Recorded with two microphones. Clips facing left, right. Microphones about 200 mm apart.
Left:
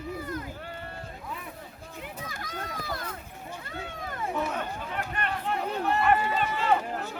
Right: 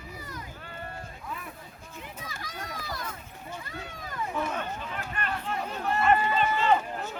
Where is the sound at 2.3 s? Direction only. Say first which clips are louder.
Left 2 dB; 55° left (ahead or behind).